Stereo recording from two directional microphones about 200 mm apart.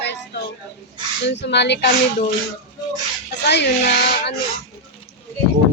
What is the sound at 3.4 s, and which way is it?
Speech, 55° left (ahead or behind).